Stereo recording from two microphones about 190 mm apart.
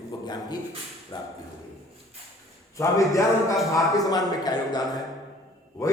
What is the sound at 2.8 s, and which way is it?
A man's voice, 15° left (ahead or behind).